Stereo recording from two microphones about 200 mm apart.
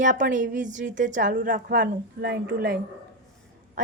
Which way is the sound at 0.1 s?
40° right (ahead or behind).